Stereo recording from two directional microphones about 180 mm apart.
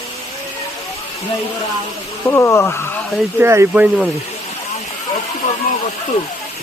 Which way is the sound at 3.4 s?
15° right (ahead or behind).